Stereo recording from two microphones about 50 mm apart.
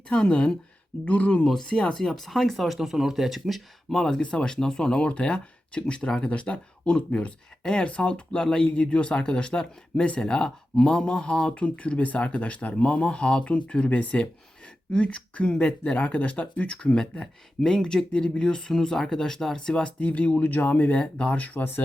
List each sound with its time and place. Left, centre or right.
0.1 s speech: left
1.5 s speech: centre
4.2 s speech: centre
20.0 s speech: left